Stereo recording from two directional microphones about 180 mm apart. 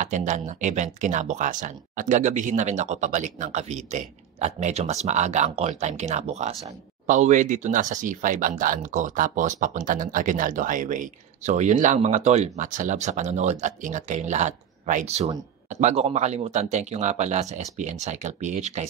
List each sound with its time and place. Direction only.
0.0 s speech: 45° right (ahead or behind)